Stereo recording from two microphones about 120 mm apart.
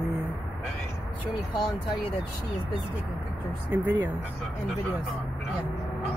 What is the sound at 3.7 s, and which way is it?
Speech, 20° right (ahead or behind).